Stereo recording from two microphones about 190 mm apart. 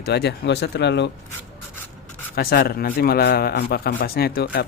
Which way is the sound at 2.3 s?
55° left (ahead or behind).